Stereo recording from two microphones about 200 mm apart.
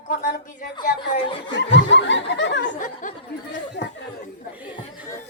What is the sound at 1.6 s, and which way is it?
Snicker, 65° left (ahead or behind).